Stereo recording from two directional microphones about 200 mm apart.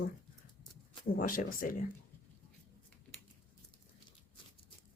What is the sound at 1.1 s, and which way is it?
Speech, 45° left (ahead or behind).